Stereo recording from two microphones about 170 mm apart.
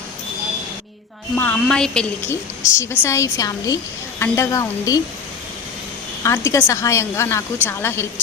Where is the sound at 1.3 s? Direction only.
5° left (ahead or behind).